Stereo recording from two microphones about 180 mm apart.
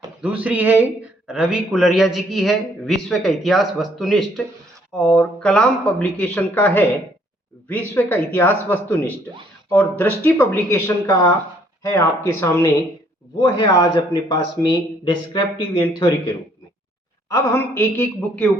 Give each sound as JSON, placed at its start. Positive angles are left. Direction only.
{"t": 0.2, "sound": "a man's voice", "side_deg": -10}
{"t": 17.2, "sound": "speech", "side_deg": 15}